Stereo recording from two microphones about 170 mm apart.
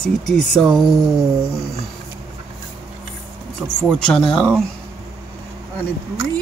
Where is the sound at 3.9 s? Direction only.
5° left (ahead or behind).